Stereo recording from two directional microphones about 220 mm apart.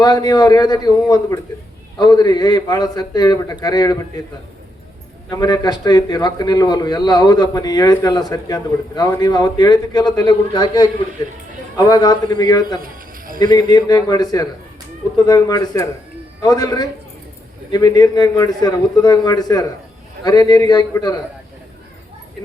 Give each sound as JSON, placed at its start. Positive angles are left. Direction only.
{"t": 0.0, "sound": "a man's voice", "side_deg": 15}
{"t": 5.3, "sound": "a man's voice", "side_deg": 15}
{"t": 12.8, "sound": "a sound", "side_deg": -40}
{"t": 13.4, "sound": "a man's voice", "side_deg": 20}